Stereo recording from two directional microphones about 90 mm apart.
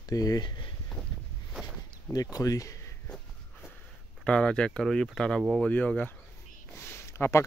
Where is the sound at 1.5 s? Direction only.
10° right (ahead or behind).